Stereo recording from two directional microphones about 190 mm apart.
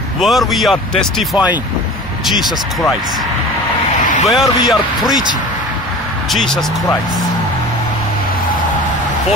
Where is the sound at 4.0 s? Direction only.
40° left (ahead or behind).